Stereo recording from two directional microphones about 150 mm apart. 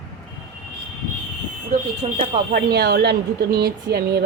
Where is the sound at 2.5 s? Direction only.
90° right.